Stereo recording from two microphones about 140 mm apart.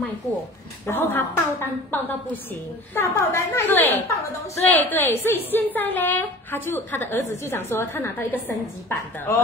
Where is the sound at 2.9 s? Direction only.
20° left (ahead or behind).